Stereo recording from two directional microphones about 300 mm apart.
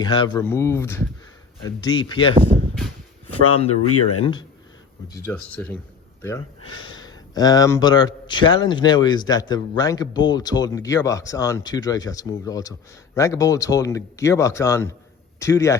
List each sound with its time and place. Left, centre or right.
0.0 s a man's voice: centre
2.7 s a sound: centre
3.8 s speech: left
4.2 s a man's voice: centre
6.6 s speech: left
7.0 s a man's voice: centre